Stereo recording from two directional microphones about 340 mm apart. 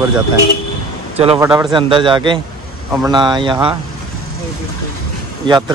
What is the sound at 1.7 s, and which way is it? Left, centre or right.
Speech, centre.